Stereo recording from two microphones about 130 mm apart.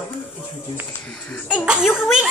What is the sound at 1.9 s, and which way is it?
Speech, 15° left (ahead or behind).